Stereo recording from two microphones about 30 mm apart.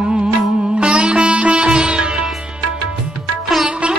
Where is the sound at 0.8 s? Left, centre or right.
Right.